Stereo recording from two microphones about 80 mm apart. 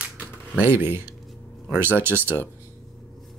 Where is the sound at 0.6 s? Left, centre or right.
Right.